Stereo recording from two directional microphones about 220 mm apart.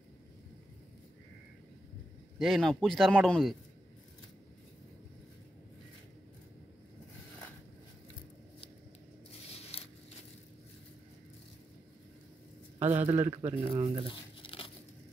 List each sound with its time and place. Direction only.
2.3 s speech: centre (ahead or behind)
9.7 s a sound: 25° left (ahead or behind)
12.7 s a sound: 10° right (ahead or behind)
13.1 s a man's voice: 10° right (ahead or behind)
13.7 s speech: 25° right (ahead or behind)
14.0 s crumpling: 25° left (ahead or behind)